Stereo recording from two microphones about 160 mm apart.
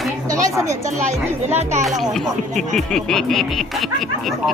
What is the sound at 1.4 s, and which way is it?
Speech, 45° right (ahead or behind).